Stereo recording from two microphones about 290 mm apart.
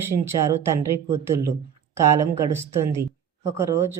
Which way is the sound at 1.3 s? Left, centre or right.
Right.